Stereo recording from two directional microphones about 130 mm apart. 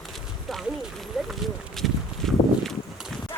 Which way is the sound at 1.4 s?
Centre (ahead or behind).